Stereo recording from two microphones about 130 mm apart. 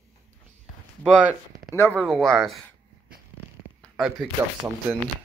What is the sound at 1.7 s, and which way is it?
Speech, 20° left (ahead or behind).